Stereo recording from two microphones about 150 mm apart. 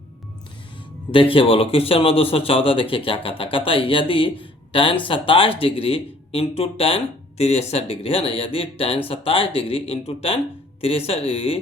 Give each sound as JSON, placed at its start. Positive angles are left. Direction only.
{"t": 1.1, "sound": "a man's voice", "side_deg": 35}